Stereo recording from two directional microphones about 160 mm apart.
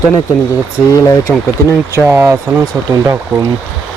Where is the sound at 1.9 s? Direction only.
15° right (ahead or behind).